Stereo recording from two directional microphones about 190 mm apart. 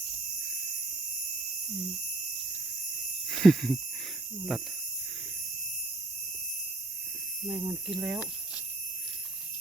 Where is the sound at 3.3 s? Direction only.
Centre (ahead or behind).